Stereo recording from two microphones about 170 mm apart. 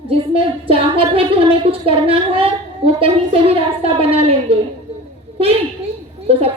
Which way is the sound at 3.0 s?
35° right (ahead or behind).